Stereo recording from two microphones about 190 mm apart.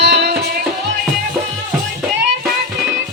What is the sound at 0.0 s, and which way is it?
Music, 60° right (ahead or behind).